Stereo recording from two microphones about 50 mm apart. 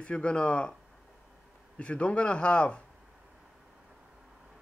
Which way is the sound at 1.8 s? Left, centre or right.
Left.